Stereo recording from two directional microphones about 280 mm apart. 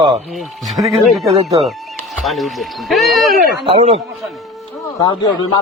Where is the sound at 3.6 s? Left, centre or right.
Right.